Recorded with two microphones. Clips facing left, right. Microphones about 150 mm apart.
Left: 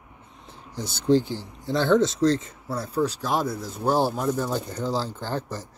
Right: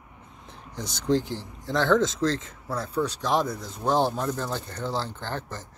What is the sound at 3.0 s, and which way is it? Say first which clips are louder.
Speech: even; 5° left (ahead or behind).